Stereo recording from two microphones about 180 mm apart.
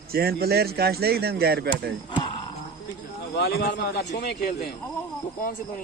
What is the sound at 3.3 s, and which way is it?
A man's voice, 65° left (ahead or behind).